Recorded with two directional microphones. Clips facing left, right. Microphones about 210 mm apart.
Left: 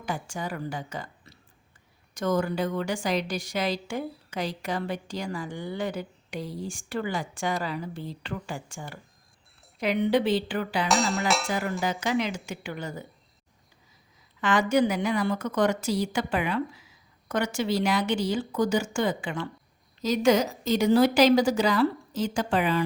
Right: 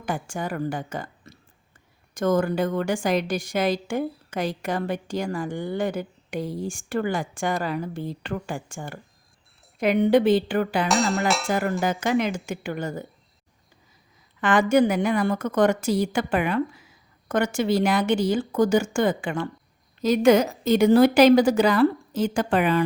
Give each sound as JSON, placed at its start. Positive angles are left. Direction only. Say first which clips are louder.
{"t": 0.0, "sound": "a woman's voice", "louder": "right 4 dB", "side_deg": -50}
{"t": 10.8, "sound": "a sound", "louder": "right 3 dB", "side_deg": 0}
{"t": 11.8, "sound": "a woman's voice", "louder": "right 4 dB", "side_deg": -50}
{"t": 14.4, "sound": "a woman's voice", "louder": "right 4 dB", "side_deg": -55}